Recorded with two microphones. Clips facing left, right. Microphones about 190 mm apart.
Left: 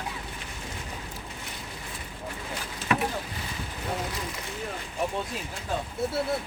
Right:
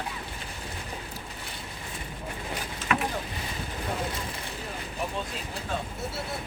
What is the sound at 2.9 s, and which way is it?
Boat, 30° left (ahead or behind).